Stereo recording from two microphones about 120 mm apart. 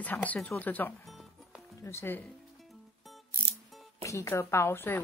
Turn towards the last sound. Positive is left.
turn(degrees=15)  # may be behind; listen again after turning